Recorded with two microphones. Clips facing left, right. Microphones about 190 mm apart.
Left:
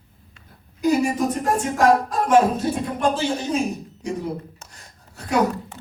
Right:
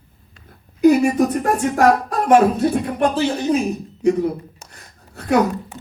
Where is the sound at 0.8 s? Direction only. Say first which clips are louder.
Right 6 dB; 60° right (ahead or behind).